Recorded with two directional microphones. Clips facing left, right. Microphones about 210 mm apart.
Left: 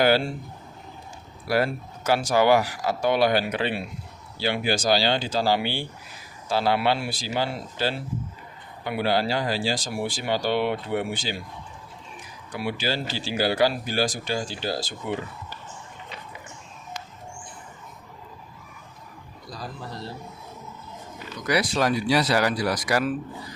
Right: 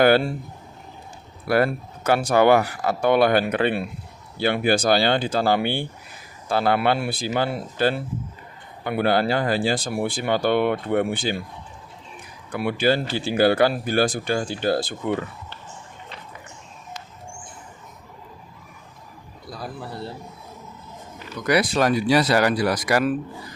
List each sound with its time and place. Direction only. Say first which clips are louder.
1.5 s speech: right 4 dB; 55° right (ahead or behind)
12.5 s speech: right 7 dB; 55° right (ahead or behind)
21.4 s speech: right 4 dB; 55° right (ahead or behind)